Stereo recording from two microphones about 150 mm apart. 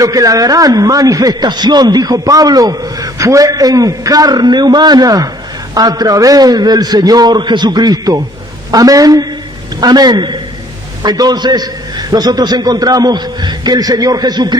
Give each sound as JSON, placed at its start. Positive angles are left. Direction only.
{"t": 0.0, "sound": "a man's voice", "side_deg": -25}